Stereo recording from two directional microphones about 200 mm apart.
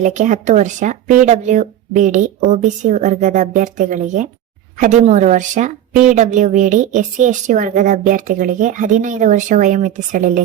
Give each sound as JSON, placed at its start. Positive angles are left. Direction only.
{"t": 0.0, "sound": "speech", "side_deg": -35}